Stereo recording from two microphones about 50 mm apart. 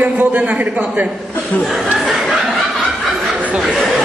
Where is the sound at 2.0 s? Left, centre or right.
Centre.